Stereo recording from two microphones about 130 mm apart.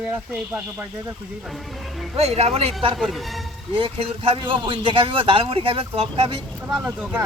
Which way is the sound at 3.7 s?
45° right (ahead or behind).